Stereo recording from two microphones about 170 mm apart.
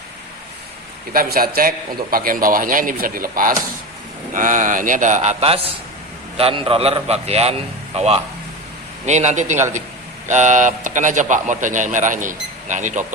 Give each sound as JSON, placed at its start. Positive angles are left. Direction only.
{"t": 1.1, "sound": "a man's voice", "side_deg": -60}